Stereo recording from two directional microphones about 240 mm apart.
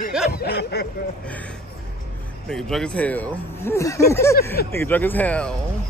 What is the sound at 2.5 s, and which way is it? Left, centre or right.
Speech, centre.